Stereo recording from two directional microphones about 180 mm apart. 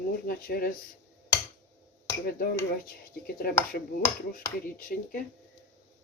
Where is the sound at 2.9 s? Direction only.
55° left (ahead or behind).